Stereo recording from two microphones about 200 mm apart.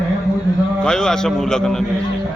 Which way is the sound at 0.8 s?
5° left (ahead or behind).